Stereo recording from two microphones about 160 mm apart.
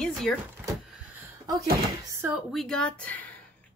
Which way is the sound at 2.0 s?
20° right (ahead or behind).